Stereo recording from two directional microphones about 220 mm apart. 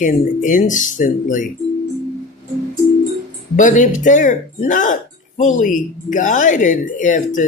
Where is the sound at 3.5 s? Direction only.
35° left (ahead or behind).